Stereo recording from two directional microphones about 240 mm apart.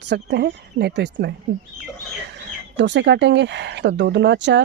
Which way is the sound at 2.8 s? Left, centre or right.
Right.